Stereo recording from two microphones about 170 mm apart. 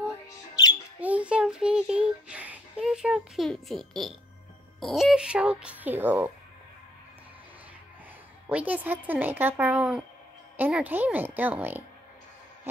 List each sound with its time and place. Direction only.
0.6 s squawk: 20° left (ahead or behind)
1.0 s child singing: 5° right (ahead or behind)
4.7 s speech: centre (ahead or behind)
8.5 s speech: 10° right (ahead or behind)